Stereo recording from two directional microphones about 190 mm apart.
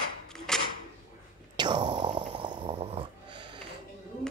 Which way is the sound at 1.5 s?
25° right (ahead or behind).